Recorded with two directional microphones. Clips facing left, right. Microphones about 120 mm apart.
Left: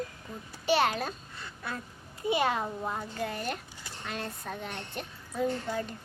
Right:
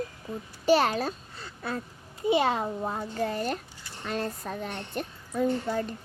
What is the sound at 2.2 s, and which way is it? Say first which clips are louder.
Child singing: right 4 dB; 30° right (ahead or behind).